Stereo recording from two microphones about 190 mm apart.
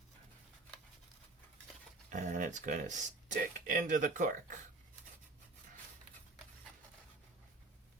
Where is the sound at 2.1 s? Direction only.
40° right (ahead or behind).